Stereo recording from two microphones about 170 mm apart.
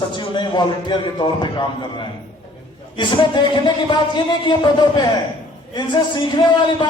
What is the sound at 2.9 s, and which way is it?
Speech, 25° left (ahead or behind).